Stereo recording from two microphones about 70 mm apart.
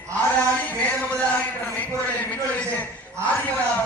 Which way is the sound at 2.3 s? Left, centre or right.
Left.